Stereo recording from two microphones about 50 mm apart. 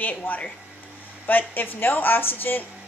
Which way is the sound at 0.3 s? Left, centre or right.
Left.